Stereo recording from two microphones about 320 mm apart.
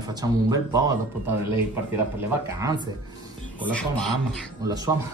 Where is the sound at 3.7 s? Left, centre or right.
Centre.